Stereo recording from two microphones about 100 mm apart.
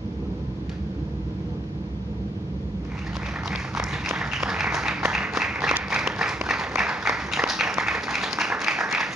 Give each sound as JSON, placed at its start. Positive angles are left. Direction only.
{"t": 4.2, "sound": "applause", "side_deg": -5}